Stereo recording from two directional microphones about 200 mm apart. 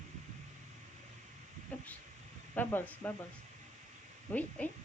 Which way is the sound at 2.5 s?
10° left (ahead or behind).